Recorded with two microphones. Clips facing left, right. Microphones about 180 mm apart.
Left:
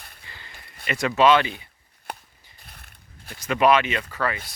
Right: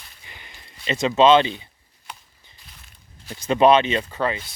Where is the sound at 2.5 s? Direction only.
60° left (ahead or behind).